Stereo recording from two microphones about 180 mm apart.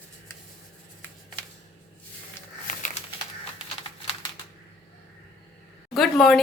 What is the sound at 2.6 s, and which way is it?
Crumpling, 45° left (ahead or behind).